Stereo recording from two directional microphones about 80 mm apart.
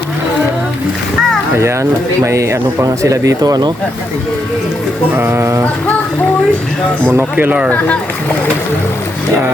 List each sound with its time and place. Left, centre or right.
1.5 s speech: right
5.1 s speech: right
7.0 s speech: right
7.7 s speech: centre